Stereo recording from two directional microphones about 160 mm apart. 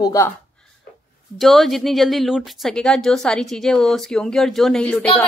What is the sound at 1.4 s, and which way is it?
Speech, centre (ahead or behind).